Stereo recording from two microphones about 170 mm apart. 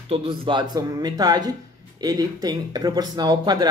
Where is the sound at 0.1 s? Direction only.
30° right (ahead or behind).